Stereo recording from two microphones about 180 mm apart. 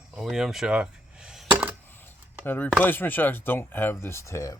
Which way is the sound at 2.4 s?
10° left (ahead or behind).